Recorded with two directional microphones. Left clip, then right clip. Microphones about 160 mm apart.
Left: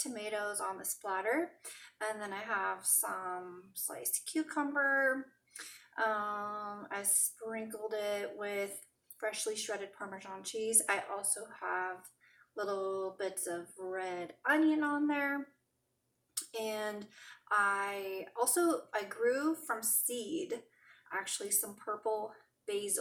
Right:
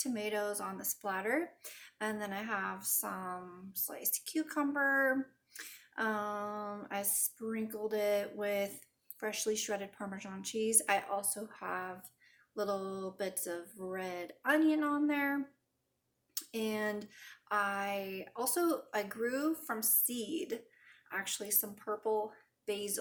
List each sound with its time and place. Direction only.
0.0 s a woman's voice: 35° right (ahead or behind)
16.5 s a woman's voice: 30° right (ahead or behind)